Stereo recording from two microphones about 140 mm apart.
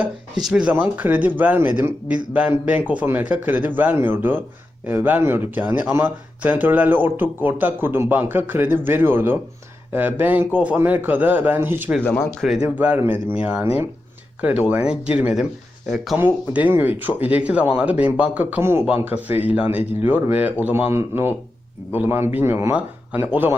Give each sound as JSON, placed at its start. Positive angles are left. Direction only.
{"t": 0.4, "sound": "speech", "side_deg": -5}
{"t": 12.0, "sound": "speech", "side_deg": 10}
{"t": 12.6, "sound": "speech", "side_deg": -10}